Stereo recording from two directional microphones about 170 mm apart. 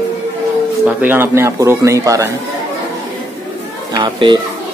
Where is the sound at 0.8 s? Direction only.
10° right (ahead or behind).